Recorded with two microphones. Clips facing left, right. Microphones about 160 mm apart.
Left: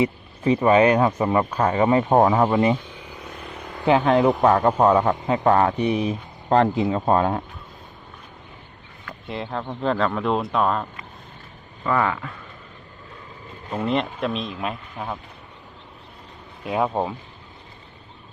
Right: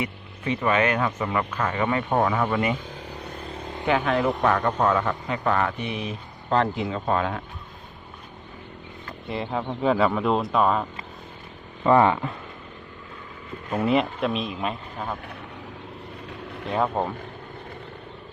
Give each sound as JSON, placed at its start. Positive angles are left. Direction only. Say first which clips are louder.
{"t": 0.0, "sound": "speech", "louder": "left 8 dB", "side_deg": 30}
{"t": 2.8, "sound": "vehicle", "louder": "right 2 dB", "side_deg": -40}
{"t": 3.8, "sound": "a man's voice", "louder": "left 5 dB", "side_deg": 35}
{"t": 5.5, "sound": "speech", "louder": "left 6 dB", "side_deg": 35}
{"t": 6.7, "sound": "speech", "louder": "left 5 dB", "side_deg": 25}
{"t": 9.2, "sound": "speech", "louder": "right 1 dB", "side_deg": 0}
{"t": 11.9, "sound": "speech", "louder": "right 4 dB", "side_deg": -25}
{"t": 13.8, "sound": "speech", "louder": "right 1 dB", "side_deg": -5}
{"t": 16.2, "sound": "vehicle", "louder": "right 9 dB", "side_deg": -70}
{"t": 16.6, "sound": "speech", "louder": "left 2 dB", "side_deg": 10}